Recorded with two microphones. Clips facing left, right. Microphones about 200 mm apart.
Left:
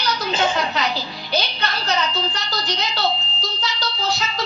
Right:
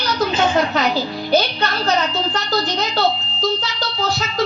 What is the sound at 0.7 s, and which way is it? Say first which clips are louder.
Speech: right 6 dB; 45° right (ahead or behind).